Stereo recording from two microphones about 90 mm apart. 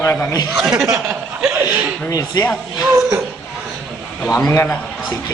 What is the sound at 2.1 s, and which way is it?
Speech, 40° left (ahead or behind).